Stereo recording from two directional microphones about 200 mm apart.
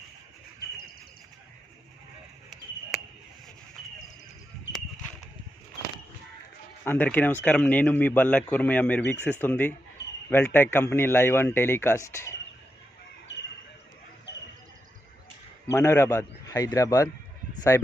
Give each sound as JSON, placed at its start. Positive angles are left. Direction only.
{"t": 6.8, "sound": "a man's voice", "side_deg": 10}
{"t": 15.6, "sound": "a man's voice", "side_deg": 10}